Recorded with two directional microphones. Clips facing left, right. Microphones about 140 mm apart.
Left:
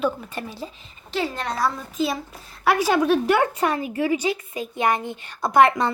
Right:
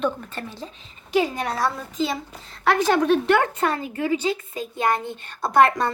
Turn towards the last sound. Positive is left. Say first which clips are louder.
# left 1 dB
turn(degrees=15)  # may be behind; listen again after turning